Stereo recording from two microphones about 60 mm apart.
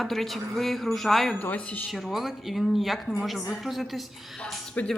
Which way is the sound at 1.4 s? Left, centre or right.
Left.